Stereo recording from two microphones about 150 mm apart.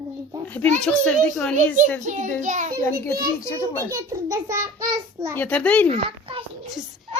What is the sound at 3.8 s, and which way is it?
A child's voice, 20° right (ahead or behind).